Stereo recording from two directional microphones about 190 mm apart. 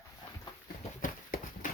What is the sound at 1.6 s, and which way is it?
Horse, 45° left (ahead or behind).